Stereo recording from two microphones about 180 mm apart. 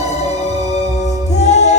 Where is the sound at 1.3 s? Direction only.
40° left (ahead or behind).